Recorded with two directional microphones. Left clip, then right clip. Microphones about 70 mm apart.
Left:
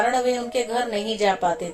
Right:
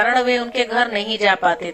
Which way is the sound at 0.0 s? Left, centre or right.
Right.